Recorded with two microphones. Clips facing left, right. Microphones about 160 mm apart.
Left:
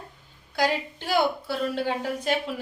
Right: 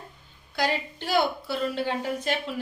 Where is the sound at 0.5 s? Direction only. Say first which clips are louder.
Left 2 dB; 10° left (ahead or behind).